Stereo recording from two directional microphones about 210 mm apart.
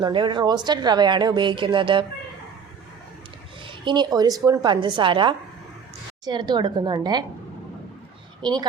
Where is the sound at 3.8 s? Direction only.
20° right (ahead or behind).